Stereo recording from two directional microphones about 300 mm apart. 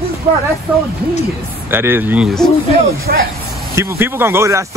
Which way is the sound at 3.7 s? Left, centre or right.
Centre.